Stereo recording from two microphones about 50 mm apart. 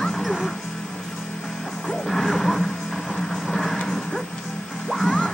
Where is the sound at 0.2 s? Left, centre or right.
Centre.